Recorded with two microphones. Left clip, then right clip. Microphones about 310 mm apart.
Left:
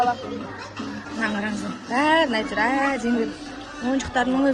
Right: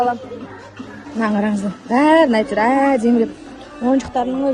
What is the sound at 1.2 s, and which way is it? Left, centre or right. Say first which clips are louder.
A man's voice: right 7 dB; centre.